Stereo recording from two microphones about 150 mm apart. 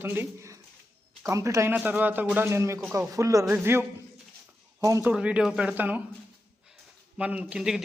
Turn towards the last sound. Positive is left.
turn(degrees=-5)  # may be behind; listen again after turning